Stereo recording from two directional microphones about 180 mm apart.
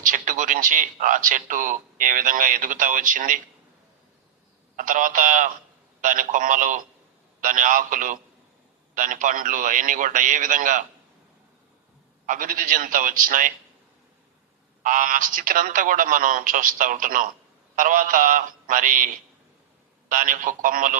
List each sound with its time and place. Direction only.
0.0 s speech: 45° right (ahead or behind)
4.8 s speech: 50° right (ahead or behind)
12.2 s speech: 50° right (ahead or behind)
14.8 s speech: 50° right (ahead or behind)